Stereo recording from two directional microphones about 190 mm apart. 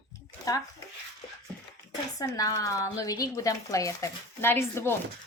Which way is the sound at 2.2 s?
20° left (ahead or behind).